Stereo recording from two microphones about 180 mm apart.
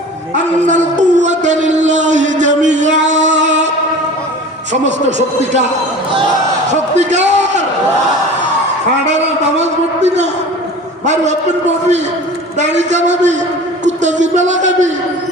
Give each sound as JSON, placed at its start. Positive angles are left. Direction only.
{"t": 0.7, "sound": "a sound", "side_deg": -45}
{"t": 3.4, "sound": "mantra", "side_deg": -40}
{"t": 5.0, "sound": "a man's voice", "side_deg": -40}
{"t": 6.9, "sound": "a sound", "side_deg": -40}
{"t": 9.0, "sound": "a man's voice", "side_deg": -40}
{"t": 12.5, "sound": "a man's voice", "side_deg": -40}